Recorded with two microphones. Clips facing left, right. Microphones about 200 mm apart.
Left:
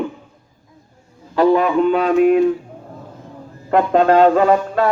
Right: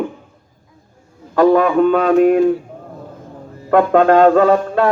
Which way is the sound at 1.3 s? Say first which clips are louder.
Right 2 dB; 45° right (ahead or behind).